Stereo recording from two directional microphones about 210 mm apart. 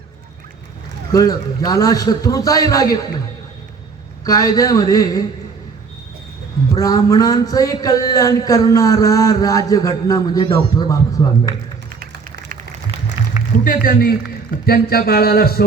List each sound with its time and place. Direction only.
1.1 s speech: 15° left (ahead or behind)
4.2 s speech: 15° left (ahead or behind)
6.7 s speech: 15° left (ahead or behind)
11.9 s a sound: 45° right (ahead or behind)
13.7 s speech: 40° left (ahead or behind)